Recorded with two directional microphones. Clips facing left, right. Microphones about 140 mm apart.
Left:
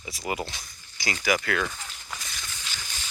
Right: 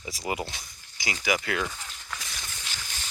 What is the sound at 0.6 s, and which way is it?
Speech, 15° right (ahead or behind).